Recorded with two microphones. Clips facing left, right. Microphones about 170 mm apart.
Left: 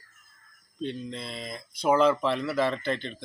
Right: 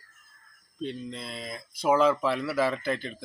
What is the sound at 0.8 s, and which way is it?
Speech, centre (ahead or behind).